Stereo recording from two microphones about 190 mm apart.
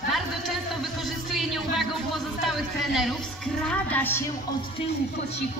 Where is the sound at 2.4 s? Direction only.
Centre (ahead or behind).